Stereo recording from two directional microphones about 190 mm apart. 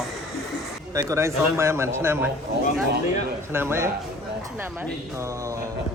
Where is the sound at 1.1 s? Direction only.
15° right (ahead or behind).